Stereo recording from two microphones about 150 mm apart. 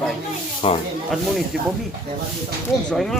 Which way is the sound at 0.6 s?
40° left (ahead or behind).